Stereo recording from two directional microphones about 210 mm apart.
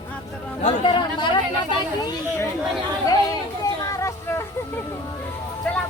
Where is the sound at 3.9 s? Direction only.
15° left (ahead or behind).